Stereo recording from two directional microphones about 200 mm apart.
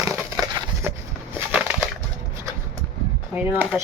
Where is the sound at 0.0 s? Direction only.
15° right (ahead or behind).